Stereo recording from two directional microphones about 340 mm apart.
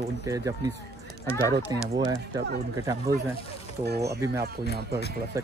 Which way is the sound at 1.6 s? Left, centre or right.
Centre.